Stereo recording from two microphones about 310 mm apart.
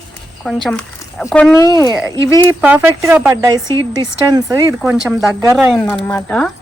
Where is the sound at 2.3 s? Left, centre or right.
Centre.